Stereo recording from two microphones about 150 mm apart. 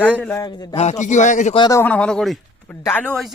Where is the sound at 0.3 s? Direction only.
25° left (ahead or behind).